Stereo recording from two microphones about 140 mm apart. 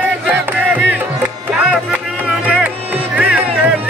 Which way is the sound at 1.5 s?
10° right (ahead or behind).